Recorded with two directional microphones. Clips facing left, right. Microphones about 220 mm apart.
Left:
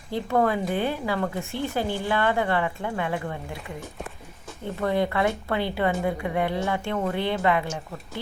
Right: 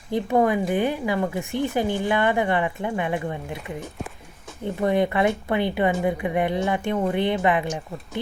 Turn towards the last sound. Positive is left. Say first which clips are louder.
# right 2 dB
turn(degrees=-20)  # may be behind; listen again after turning